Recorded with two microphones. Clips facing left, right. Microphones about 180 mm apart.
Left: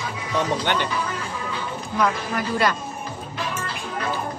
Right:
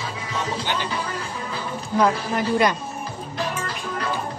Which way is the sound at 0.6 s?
65° left (ahead or behind).